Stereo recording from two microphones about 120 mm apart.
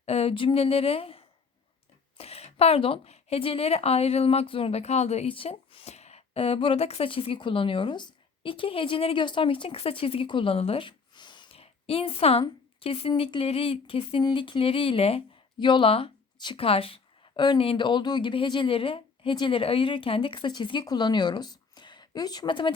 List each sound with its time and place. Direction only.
0.0 s a woman's voice: 60° left (ahead or behind); by 11.4 s 40° left (ahead or behind)
11.5 s speech: 55° left (ahead or behind)